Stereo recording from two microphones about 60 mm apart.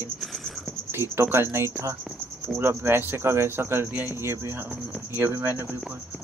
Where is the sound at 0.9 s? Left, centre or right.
Right.